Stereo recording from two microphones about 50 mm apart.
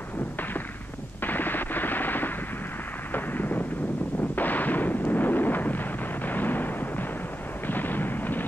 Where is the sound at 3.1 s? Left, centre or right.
Left.